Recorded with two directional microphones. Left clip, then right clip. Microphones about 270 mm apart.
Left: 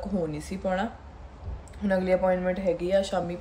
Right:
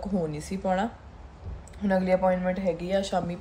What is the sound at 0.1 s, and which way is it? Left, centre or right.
A woman's voice, centre.